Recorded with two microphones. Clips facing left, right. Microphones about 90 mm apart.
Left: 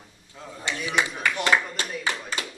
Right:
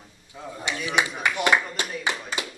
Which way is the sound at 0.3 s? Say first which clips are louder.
Right 1 dB; 15° right (ahead or behind).